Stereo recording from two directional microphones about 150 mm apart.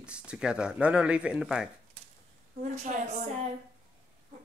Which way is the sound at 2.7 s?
50° right (ahead or behind).